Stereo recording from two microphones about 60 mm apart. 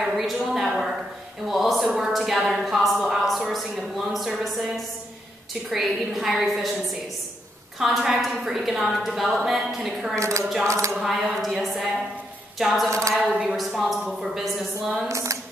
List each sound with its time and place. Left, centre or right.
0.0 s a sound: centre
5.5 s a woman's voice: centre
10.1 s speech: right
10.4 s a woman's voice: centre
13.6 s a woman's voice: centre
15.0 s speech: right